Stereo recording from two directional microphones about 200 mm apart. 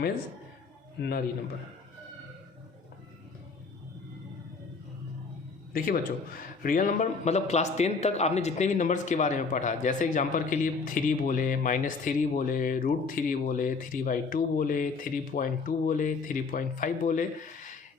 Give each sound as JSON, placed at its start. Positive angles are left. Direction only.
{"t": 0.9, "sound": "a man's voice", "side_deg": 55}
{"t": 5.7, "sound": "a man's voice", "side_deg": 45}